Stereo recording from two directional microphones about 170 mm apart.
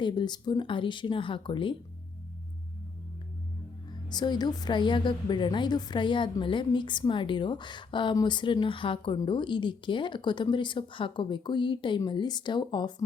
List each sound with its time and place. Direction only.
0.0 s a woman's voice: 25° left (ahead or behind)
4.1 s a woman's voice: 25° left (ahead or behind)